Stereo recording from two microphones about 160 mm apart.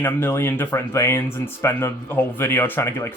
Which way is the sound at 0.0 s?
15° left (ahead or behind).